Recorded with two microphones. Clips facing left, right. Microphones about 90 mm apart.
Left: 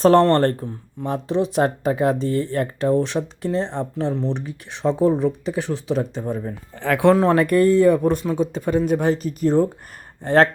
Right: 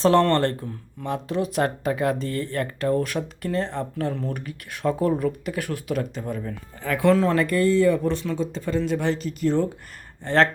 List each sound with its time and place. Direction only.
0.0 s speech: 40° left (ahead or behind)
6.7 s speech: 65° left (ahead or behind)